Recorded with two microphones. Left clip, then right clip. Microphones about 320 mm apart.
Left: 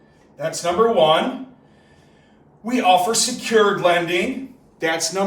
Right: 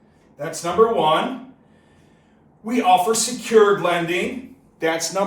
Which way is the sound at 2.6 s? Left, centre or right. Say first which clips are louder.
Even; centre.